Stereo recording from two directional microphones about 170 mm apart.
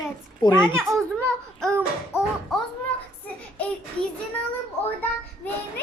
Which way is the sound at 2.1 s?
15° left (ahead or behind).